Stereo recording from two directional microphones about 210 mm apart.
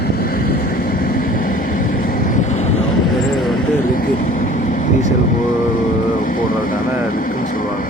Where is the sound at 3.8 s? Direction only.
40° left (ahead or behind).